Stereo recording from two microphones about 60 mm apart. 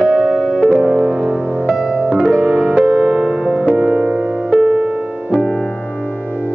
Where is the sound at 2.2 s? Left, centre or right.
Centre.